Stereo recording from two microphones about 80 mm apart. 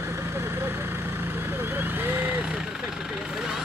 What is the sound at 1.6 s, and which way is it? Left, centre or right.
Speech, right.